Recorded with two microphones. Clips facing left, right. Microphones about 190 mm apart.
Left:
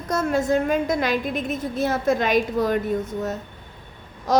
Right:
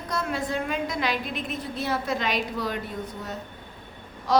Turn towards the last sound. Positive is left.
turn(degrees=45)  # may be behind; listen again after turning